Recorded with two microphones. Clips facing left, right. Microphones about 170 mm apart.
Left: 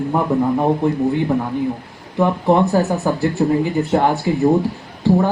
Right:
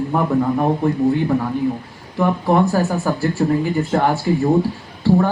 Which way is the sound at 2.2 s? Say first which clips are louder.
Left 1 dB; 20° left (ahead or behind).